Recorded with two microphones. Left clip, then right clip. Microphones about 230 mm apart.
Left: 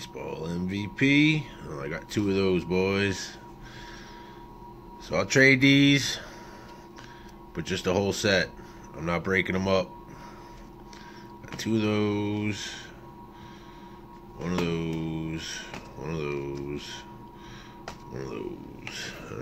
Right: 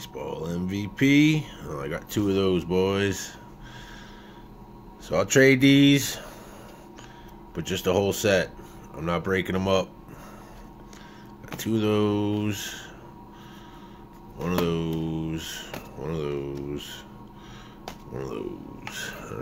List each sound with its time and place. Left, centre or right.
0.0 s speech: centre
5.0 s speech: centre
7.5 s speech: centre
11.5 s speech: centre
14.6 s speech: centre
18.1 s speech: centre